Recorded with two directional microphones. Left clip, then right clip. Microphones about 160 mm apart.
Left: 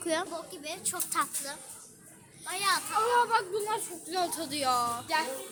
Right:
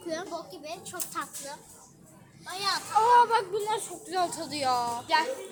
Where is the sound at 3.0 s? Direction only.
Centre (ahead or behind).